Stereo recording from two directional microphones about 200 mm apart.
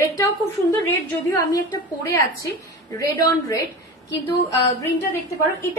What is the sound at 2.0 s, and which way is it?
Speech, 15° left (ahead or behind).